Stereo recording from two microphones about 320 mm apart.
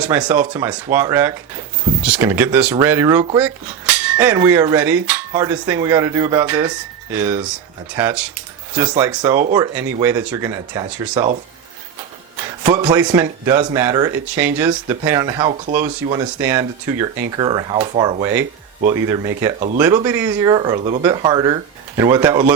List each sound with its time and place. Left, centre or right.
0.0 s speech: centre
12.4 s speech: centre
19.5 s speech: right
19.8 s speech: centre